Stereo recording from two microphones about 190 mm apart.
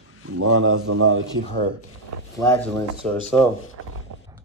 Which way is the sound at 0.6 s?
90° right.